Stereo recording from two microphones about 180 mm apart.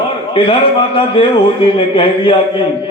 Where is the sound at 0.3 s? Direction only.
30° left (ahead or behind).